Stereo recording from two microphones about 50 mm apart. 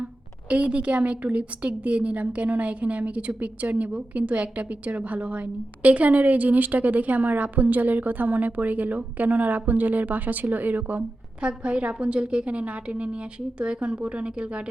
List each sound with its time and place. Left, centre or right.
0.5 s a woman's voice: right
11.4 s a woman's voice: right